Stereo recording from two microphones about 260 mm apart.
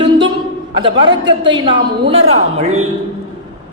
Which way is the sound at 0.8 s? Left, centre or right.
Right.